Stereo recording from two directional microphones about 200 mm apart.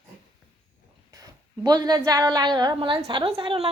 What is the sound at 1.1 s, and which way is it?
A woman's voice, 20° right (ahead or behind).